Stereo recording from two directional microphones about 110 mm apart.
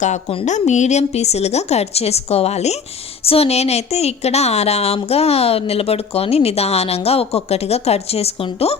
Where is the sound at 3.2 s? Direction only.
65° left (ahead or behind).